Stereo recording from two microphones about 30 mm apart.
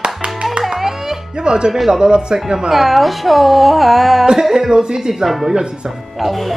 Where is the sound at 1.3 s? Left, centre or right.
Right.